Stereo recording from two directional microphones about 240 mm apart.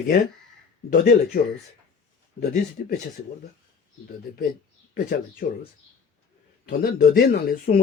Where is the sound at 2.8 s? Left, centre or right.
Left.